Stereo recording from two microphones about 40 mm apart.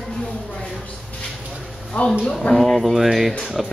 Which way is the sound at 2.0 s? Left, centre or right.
Left.